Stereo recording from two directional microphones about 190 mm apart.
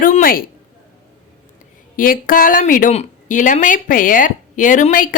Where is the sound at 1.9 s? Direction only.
50° left (ahead or behind).